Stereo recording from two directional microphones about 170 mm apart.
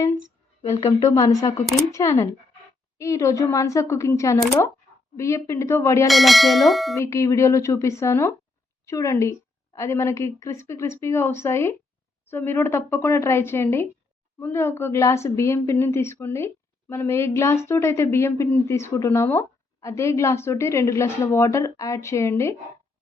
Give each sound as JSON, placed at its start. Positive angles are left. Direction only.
{"t": 1.1, "sound": "speech", "side_deg": 20}
{"t": 6.1, "sound": "bell", "side_deg": 0}
{"t": 6.9, "sound": "speech", "side_deg": 15}